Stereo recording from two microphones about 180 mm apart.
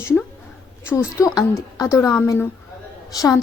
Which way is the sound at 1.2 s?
15° left (ahead or behind).